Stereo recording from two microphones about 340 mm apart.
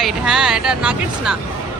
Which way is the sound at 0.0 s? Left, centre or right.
Centre.